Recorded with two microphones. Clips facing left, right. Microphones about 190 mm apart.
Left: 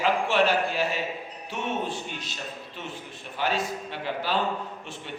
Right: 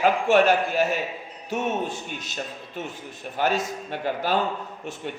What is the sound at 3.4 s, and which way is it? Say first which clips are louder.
A man's voice: right 3 dB; 45° right (ahead or behind).